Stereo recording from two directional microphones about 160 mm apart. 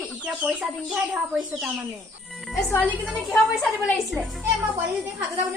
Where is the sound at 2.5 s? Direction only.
15° left (ahead or behind).